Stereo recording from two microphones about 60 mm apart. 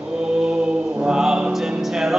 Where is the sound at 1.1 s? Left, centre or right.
Centre.